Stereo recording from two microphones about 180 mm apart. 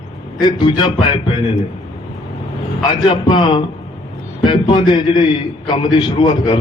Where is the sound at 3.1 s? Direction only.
30° left (ahead or behind).